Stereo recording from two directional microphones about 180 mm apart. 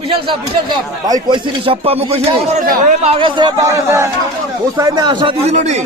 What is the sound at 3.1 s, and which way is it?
A man's voice, 25° right (ahead or behind).